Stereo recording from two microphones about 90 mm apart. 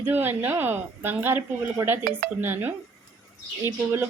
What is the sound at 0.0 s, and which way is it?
Speech, 25° right (ahead or behind).